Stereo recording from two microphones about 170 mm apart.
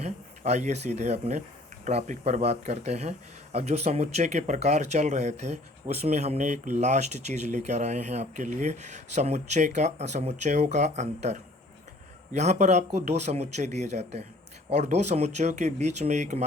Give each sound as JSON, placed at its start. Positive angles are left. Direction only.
{"t": 0.0, "sound": "speech", "side_deg": -40}